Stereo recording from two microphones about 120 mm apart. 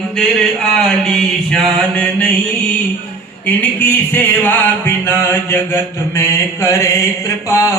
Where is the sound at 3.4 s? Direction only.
15° left (ahead or behind).